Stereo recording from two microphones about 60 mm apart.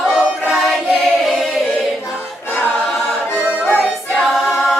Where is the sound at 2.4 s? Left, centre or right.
Left.